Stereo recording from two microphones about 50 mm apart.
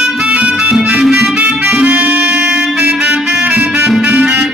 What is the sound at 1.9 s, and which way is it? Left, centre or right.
Music, right.